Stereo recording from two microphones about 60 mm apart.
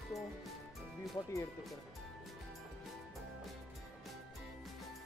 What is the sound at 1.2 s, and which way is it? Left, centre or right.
Speech, left.